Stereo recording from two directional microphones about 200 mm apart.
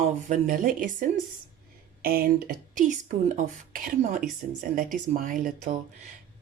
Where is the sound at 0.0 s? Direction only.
40° right (ahead or behind).